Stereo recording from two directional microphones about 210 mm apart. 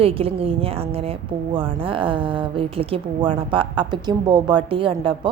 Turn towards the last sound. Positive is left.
turn(degrees=-25)  # may be behind; listen again after turning